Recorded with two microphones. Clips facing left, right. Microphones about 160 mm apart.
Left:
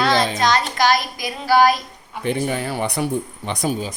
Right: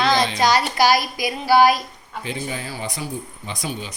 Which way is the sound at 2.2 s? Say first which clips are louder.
Left 7 dB; 60° left (ahead or behind).